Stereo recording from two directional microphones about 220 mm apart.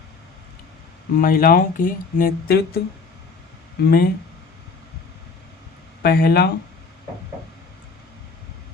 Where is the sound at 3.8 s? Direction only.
45° left (ahead or behind).